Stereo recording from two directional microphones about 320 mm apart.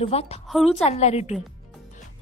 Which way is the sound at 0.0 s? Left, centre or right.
Centre.